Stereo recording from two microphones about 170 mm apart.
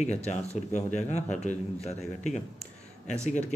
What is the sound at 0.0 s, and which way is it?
A man's voice, 40° left (ahead or behind).